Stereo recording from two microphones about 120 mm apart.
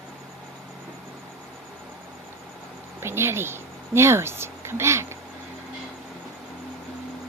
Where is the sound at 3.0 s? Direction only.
20° right (ahead or behind).